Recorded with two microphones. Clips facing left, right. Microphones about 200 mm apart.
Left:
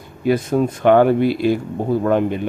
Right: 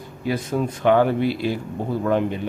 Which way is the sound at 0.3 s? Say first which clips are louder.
Left 6 dB; 50° left (ahead or behind).